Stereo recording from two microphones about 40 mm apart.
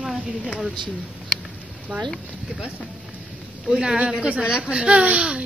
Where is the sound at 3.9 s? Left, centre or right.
Right.